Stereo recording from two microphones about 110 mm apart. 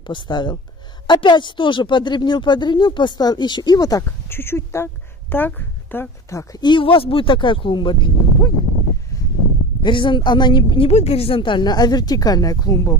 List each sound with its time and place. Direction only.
0.0 s speech: 45° left (ahead or behind)
4.3 s a woman's voice: 20° left (ahead or behind)
6.6 s speech: 50° left (ahead or behind)
9.8 s speech: 45° left (ahead or behind)
10.9 s speech: 70° left (ahead or behind); by 12.9 s 35° left (ahead or behind)